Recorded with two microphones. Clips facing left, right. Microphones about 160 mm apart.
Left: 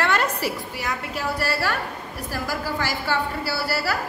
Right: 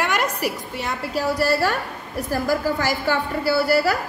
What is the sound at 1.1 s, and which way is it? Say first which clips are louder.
A woman's voice: right 8 dB; 40° right (ahead or behind).